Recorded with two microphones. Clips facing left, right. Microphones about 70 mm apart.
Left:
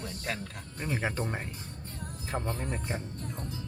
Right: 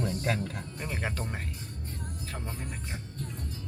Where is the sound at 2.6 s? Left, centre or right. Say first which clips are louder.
Left 5 dB; left.